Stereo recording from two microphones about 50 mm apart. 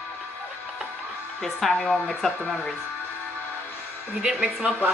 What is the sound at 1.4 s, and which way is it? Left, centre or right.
Speech, centre.